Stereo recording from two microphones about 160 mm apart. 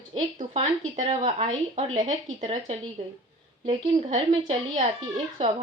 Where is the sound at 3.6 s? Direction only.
35° right (ahead or behind).